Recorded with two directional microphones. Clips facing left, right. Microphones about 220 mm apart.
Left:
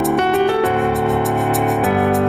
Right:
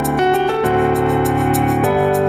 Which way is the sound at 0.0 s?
Centre (ahead or behind).